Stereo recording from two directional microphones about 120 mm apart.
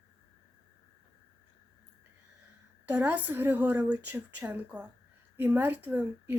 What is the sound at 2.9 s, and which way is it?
A woman's voice, 15° right (ahead or behind).